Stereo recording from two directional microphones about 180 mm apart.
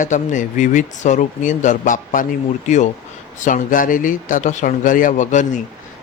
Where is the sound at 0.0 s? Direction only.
45° left (ahead or behind).